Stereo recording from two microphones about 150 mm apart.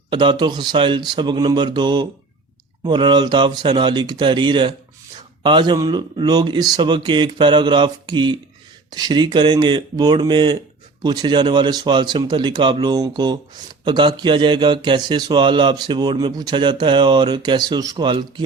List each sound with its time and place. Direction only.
0.1 s a man's voice: 30° right (ahead or behind)